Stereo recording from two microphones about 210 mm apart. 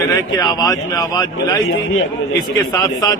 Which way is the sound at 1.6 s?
70° left (ahead or behind).